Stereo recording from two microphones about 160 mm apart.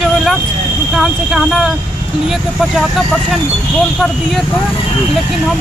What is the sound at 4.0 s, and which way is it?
Speech, centre (ahead or behind).